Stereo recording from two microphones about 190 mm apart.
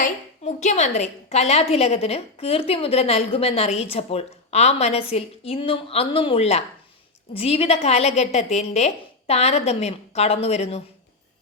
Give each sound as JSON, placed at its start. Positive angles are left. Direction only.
{"t": 0.0, "sound": "a woman's voice", "side_deg": 40}